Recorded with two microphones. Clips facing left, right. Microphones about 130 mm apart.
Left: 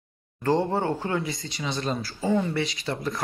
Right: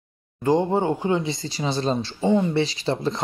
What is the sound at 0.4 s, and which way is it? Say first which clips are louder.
Speech: right 3 dB; 15° right (ahead or behind).